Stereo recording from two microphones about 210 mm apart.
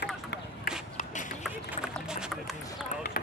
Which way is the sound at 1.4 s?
5° right (ahead or behind).